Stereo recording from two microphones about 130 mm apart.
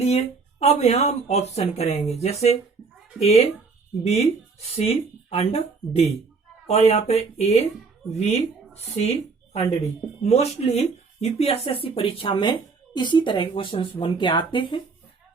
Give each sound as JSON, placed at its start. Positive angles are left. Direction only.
{"t": 0.6, "sound": "speech", "side_deg": 55}